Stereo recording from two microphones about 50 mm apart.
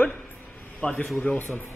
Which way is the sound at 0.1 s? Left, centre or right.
Left.